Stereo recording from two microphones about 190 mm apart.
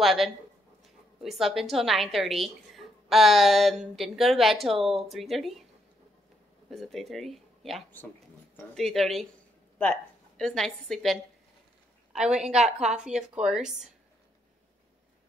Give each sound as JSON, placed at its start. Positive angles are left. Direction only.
{"t": 0.0, "sound": "a woman's voice", "side_deg": 0}
{"t": 6.7, "sound": "a woman's voice", "side_deg": 0}
{"t": 12.6, "sound": "a woman's voice", "side_deg": -35}
{"t": 12.9, "sound": "a woman's voice", "side_deg": -5}